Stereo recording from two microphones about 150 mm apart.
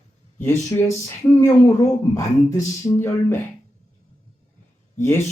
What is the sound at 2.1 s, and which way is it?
Speech, 20° left (ahead or behind).